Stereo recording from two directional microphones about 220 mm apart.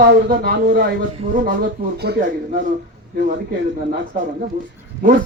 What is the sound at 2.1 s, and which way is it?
Speech, 45° right (ahead or behind).